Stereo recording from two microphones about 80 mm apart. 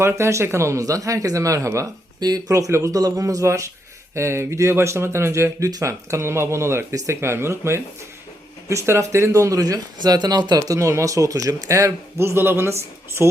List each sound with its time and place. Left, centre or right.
0.0 s speech: right